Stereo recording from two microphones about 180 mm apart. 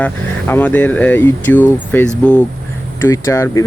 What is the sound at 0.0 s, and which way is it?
Speech, 10° left (ahead or behind).